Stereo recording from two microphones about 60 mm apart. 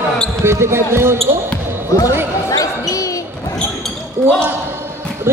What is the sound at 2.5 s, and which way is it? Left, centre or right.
Basketball bounce, left.